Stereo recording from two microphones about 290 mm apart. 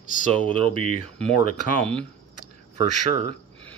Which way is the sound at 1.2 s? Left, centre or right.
Centre.